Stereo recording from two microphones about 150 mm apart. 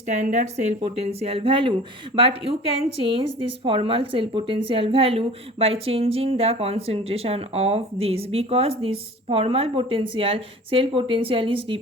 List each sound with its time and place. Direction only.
0.1 s speech: 55° right (ahead or behind); by 11.8 s 35° right (ahead or behind)